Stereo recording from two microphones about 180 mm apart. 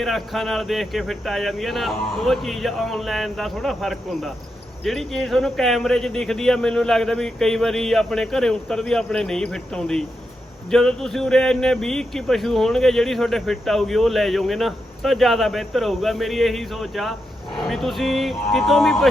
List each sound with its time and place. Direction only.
0.0 s speech: centre (ahead or behind)